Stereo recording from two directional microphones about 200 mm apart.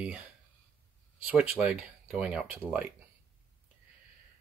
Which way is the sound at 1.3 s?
5° right (ahead or behind).